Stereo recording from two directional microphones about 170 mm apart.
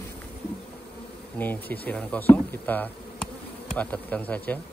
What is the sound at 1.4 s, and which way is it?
Speech, 10° left (ahead or behind).